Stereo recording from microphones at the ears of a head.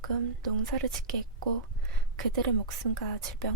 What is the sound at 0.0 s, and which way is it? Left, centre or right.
A woman's voice, right.